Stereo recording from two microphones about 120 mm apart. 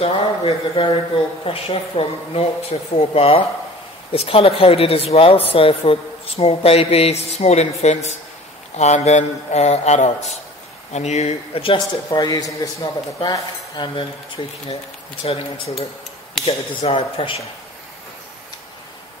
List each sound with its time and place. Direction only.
0.0 s a man's voice: 50° left (ahead or behind)
12.1 s speech: 35° left (ahead or behind)
13.2 s speech: 40° left (ahead or behind)
15.2 s speech: 55° left (ahead or behind)